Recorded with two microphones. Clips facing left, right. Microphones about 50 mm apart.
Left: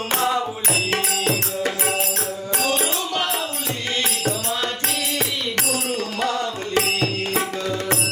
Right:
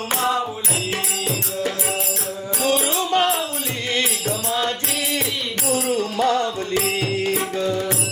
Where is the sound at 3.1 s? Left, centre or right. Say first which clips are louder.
Right 6 dB; right.